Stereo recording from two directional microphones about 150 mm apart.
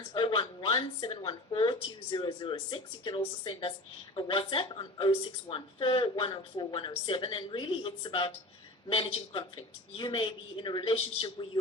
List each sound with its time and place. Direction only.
0.1 s speech: 35° left (ahead or behind)